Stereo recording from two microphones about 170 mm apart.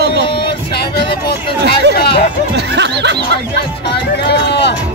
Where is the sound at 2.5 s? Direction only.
85° right.